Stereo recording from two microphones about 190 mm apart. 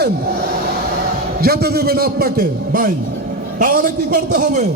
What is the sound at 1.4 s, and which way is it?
A man's voice, 55° right (ahead or behind).